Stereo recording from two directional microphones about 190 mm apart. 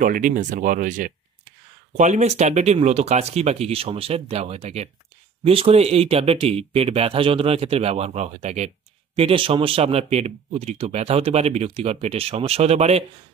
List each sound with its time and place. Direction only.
0.0 s speech: 45° right (ahead or behind)